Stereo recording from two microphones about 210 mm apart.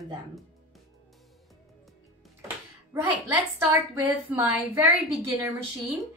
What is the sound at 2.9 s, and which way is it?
A woman's voice, 15° right (ahead or behind).